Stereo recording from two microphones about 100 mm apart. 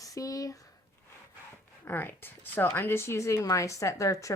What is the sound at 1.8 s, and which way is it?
Speech, 20° left (ahead or behind).